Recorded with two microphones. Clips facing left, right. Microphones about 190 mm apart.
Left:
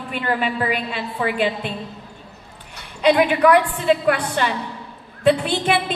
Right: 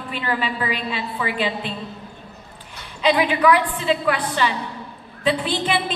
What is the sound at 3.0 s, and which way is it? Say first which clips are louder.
A woman's voice: left 2 dB; 50° left (ahead or behind).